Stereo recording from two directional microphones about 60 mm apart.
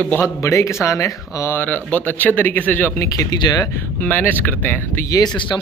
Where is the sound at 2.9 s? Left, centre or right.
Left.